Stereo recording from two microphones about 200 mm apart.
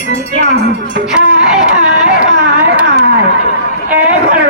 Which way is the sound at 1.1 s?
5° right (ahead or behind).